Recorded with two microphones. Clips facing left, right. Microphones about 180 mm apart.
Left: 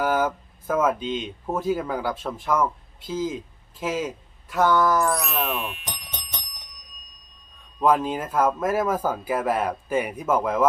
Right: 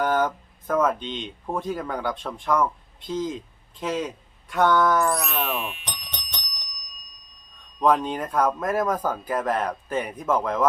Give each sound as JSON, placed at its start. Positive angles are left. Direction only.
{"t": 0.0, "sound": "speech", "side_deg": 5}
{"t": 7.8, "sound": "speech", "side_deg": 5}